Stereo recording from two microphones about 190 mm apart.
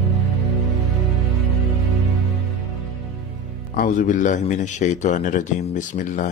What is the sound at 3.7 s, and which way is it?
A man's voice, 45° left (ahead or behind).